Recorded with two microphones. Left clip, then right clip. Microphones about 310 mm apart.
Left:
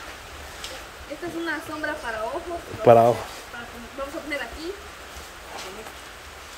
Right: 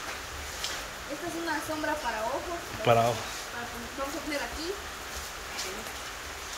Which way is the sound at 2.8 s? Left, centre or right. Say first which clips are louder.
Left 9 dB; centre.